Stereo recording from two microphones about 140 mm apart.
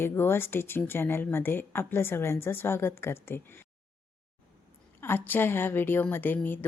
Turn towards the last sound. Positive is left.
turn(degrees=15)  # may be behind; listen again after turning